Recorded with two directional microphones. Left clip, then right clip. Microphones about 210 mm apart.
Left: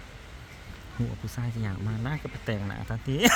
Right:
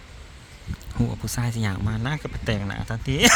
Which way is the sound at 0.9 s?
30° right (ahead or behind).